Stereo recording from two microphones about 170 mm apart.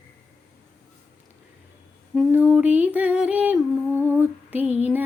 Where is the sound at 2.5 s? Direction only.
10° right (ahead or behind).